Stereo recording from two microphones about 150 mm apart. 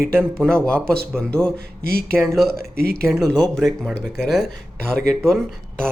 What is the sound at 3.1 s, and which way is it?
Speech, centre (ahead or behind).